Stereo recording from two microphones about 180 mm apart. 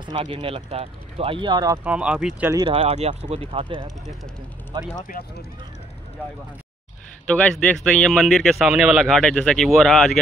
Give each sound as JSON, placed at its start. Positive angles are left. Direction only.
{"t": 0.0, "sound": "speech", "side_deg": -30}
{"t": 1.9, "sound": "speech", "side_deg": -5}
{"t": 2.7, "sound": "speech", "side_deg": -35}
{"t": 7.2, "sound": "speech", "side_deg": 5}